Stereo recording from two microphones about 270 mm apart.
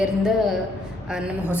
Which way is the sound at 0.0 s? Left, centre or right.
Centre.